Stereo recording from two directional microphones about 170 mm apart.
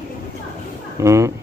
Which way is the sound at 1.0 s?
15° right (ahead or behind).